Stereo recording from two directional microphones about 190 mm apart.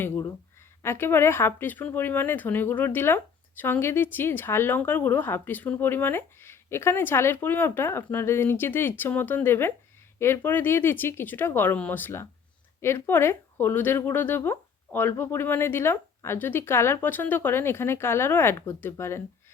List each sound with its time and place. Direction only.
0.0 s speech: 15° left (ahead or behind)